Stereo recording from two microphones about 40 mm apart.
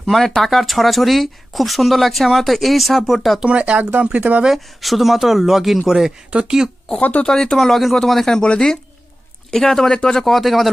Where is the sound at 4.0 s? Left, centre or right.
Right.